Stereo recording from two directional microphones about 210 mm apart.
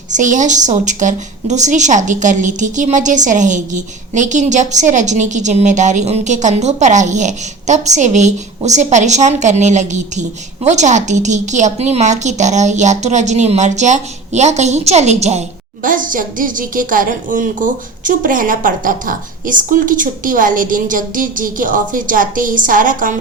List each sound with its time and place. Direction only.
0.1 s a woman's voice: 35° right (ahead or behind)